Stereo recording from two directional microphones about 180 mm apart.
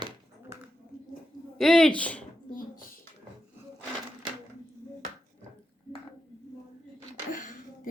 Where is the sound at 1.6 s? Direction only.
5° left (ahead or behind).